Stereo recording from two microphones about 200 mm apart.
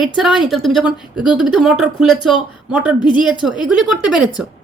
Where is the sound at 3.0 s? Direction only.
20° left (ahead or behind).